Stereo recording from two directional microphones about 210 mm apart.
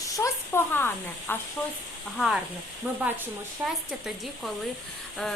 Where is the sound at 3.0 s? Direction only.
10° right (ahead or behind).